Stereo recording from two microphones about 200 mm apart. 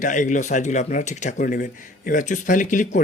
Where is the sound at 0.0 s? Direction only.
40° left (ahead or behind).